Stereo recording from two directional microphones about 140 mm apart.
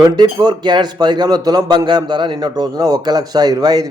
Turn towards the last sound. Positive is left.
turn(degrees=-30)  # may be behind; listen again after turning